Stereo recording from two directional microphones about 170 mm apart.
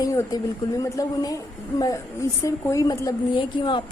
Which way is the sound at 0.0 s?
20° left (ahead or behind).